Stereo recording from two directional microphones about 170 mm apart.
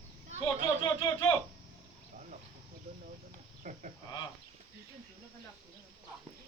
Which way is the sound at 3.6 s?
50° right (ahead or behind).